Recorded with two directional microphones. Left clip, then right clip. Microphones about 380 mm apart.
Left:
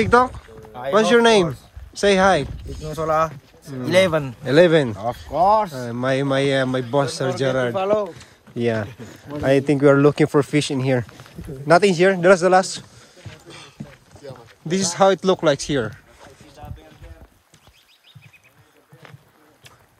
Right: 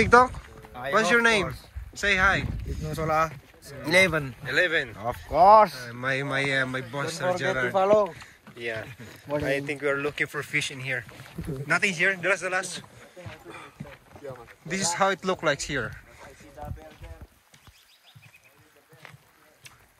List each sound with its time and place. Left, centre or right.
0.0 s speech: centre
4.9 s speech: centre
7.7 s speech: right
9.7 s speech: centre
13.3 s music: centre
14.7 s speech: centre